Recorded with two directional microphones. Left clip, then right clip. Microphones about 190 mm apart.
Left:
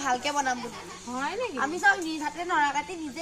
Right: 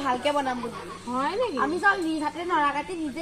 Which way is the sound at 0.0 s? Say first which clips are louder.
Right 2 dB; 10° left (ahead or behind).